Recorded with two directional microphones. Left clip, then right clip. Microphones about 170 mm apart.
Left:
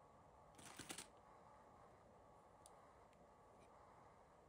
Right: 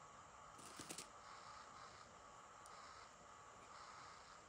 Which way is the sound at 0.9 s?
35° left (ahead or behind).